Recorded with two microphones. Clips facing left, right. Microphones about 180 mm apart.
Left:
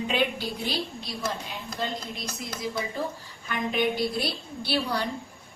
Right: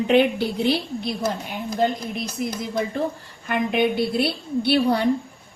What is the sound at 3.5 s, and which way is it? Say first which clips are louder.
A woman's voice: right 6 dB; 60° right (ahead or behind).